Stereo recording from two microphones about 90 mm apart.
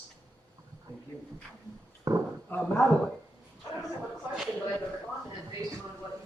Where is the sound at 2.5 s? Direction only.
20° left (ahead or behind).